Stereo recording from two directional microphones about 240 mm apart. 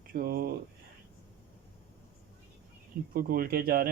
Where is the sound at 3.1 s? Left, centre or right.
Right.